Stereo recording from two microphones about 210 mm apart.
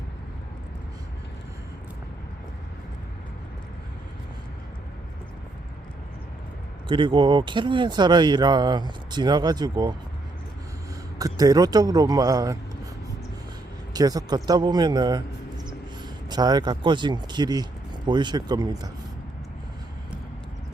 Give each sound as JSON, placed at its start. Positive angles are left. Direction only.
{"t": 6.8, "sound": "speech", "side_deg": -25}
{"t": 11.2, "sound": "a man's voice", "side_deg": -15}
{"t": 13.9, "sound": "speech", "side_deg": -20}